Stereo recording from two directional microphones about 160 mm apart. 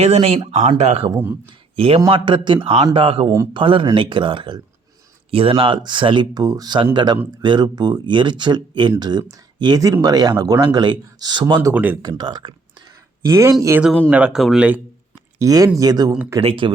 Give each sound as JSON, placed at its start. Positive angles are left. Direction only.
{"t": 0.0, "sound": "a man's voice", "side_deg": -40}
{"t": 11.7, "sound": "speech", "side_deg": -10}
{"t": 12.0, "sound": "speech", "side_deg": -25}
{"t": 14.1, "sound": "speech", "side_deg": -5}
{"t": 15.4, "sound": "speech", "side_deg": -20}
{"t": 16.4, "sound": "speech", "side_deg": -35}